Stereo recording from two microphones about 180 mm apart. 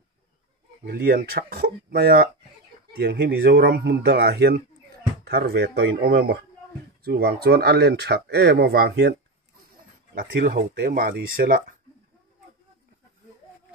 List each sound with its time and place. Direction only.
0.8 s speech: 60° right (ahead or behind)
10.1 s speech: 55° right (ahead or behind)